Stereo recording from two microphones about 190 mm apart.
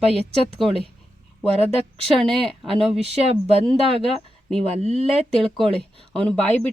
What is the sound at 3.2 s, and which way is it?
Speech, 30° right (ahead or behind).